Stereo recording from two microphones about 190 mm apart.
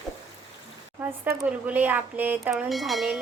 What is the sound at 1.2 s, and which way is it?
Speech, 10° right (ahead or behind).